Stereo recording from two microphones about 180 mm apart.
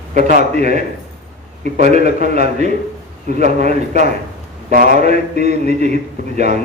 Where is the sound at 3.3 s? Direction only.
40° right (ahead or behind).